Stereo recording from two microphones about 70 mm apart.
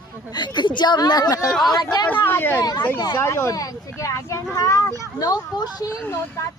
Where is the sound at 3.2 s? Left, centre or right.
Left.